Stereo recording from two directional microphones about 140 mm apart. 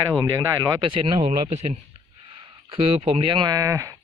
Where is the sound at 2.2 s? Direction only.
40° right (ahead or behind); by 3.9 s 25° right (ahead or behind).